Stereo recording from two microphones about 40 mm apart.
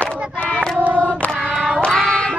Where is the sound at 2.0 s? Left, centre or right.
Centre.